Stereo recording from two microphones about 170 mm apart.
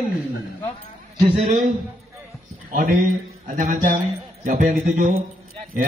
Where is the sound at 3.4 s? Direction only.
45° right (ahead or behind).